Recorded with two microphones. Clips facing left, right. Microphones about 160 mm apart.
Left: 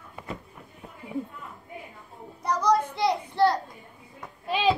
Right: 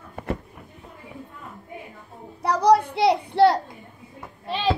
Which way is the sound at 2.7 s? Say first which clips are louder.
Right 6 dB; 75° right (ahead or behind).